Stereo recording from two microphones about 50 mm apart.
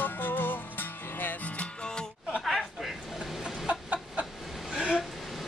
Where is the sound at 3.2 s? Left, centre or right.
Centre.